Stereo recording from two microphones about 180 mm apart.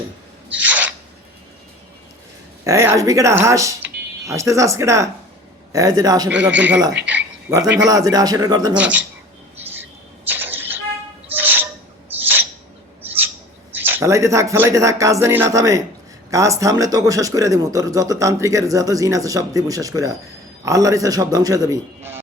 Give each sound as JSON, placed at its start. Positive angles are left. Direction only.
{"t": 0.6, "sound": "owl", "side_deg": -10}
{"t": 2.6, "sound": "speech", "side_deg": -15}
{"t": 6.3, "sound": "speech", "side_deg": -10}
{"t": 7.9, "sound": "speech", "side_deg": -20}
{"t": 8.7, "sound": "speech", "side_deg": -10}
{"t": 10.2, "sound": "a sound", "side_deg": -10}
{"t": 11.3, "sound": "owl", "side_deg": -10}
{"t": 12.2, "sound": "a sound", "side_deg": -10}
{"t": 13.1, "sound": "bird", "side_deg": -10}
{"t": 13.7, "sound": "speech", "side_deg": -10}